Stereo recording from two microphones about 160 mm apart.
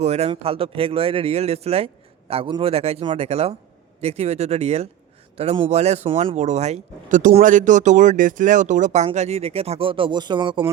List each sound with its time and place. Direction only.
0.0 s speech: 40° right (ahead or behind)